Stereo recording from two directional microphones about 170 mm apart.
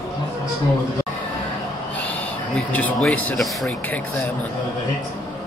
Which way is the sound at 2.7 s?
10° left (ahead or behind).